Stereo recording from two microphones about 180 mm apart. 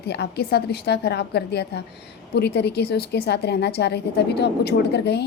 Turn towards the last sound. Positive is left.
turn(degrees=70)  # may be behind; listen again after turning